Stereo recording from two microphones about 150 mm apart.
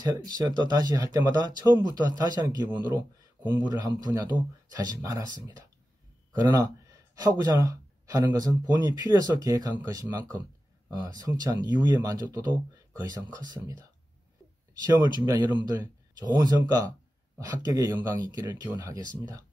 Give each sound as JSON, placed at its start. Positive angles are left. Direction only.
{"t": 0.0, "sound": "speech", "side_deg": -25}